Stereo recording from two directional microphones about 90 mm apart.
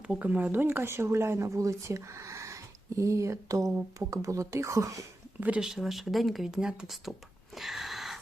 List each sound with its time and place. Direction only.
0.1 s speech: 15° right (ahead or behind); by 4.9 s 35° right (ahead or behind)
5.4 s speech: 15° right (ahead or behind)
5.6 s speech: 5° right (ahead or behind)
7.5 s a sound: centre (ahead or behind)